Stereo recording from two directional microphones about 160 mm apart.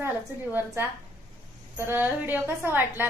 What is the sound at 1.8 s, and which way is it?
A woman's voice, 15° right (ahead or behind).